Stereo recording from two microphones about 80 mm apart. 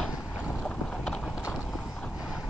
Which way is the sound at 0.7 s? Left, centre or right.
Centre.